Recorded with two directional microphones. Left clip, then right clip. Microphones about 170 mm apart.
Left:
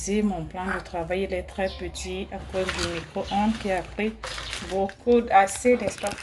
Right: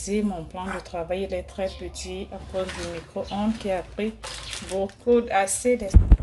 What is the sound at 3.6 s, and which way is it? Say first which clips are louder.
Speech: even; 20° right (ahead or behind).